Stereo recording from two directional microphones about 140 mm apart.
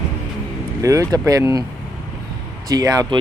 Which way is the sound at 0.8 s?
25° right (ahead or behind).